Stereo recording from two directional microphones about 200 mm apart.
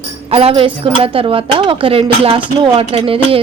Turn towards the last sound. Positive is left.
turn(degrees=-30)  # may be behind; listen again after turning